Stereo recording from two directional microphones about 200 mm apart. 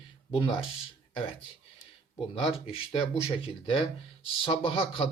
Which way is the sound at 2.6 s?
30° left (ahead or behind).